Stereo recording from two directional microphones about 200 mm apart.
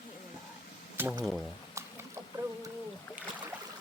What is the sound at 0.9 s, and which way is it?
Speech, 10° right (ahead or behind).